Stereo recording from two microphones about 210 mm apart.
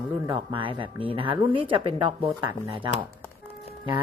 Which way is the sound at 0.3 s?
25° right (ahead or behind).